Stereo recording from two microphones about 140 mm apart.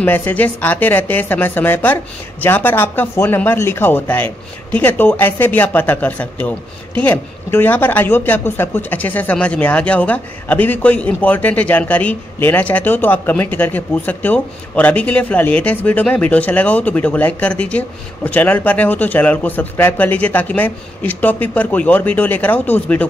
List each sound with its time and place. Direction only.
0.0 s speech: 10° left (ahead or behind)